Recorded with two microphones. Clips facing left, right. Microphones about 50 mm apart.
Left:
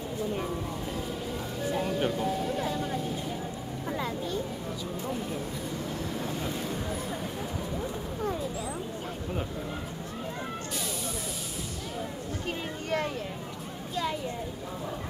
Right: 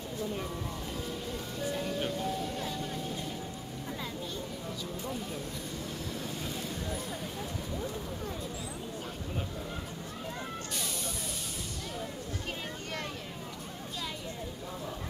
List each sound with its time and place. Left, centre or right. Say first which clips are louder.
1.6 s music: left 5 dB; centre
2.8 s vehicle: left 5 dB; centre
6.1 s vehicle: left 5 dB; centre
7.7 s a sound: left 3 dB; centre